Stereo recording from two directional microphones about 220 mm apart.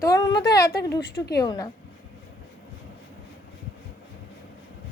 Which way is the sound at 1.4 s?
20° left (ahead or behind).